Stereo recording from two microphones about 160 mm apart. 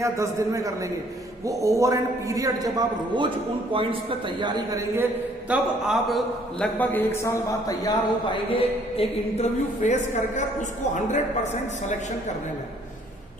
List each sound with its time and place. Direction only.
0.0 s a man's voice: 20° right (ahead or behind)
5.5 s a man's voice: 5° right (ahead or behind)
6.7 s speech: 15° left (ahead or behind)
8.5 s a woman's voice: 40° left (ahead or behind)